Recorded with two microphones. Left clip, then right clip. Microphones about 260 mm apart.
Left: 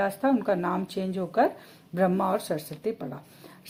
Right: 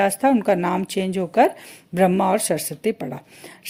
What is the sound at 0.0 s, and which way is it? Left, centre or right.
A woman's voice, right.